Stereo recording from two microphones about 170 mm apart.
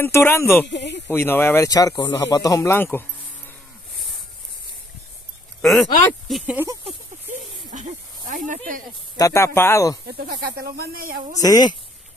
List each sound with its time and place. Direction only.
0.0 s speech: 15° left (ahead or behind)
0.7 s speech: 90° left
1.0 s speech: 10° left (ahead or behind)
5.6 s speech: centre (ahead or behind)
6.4 s speech: 10° right (ahead or behind)
7.7 s snake: 45° right (ahead or behind)
9.1 s speech: 20° left (ahead or behind)
10.0 s speech: 70° right (ahead or behind)
11.4 s a woman's voice: 20° left (ahead or behind)